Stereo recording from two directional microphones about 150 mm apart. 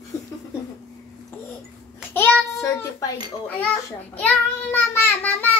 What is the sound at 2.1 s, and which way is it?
Child singing, 15° left (ahead or behind).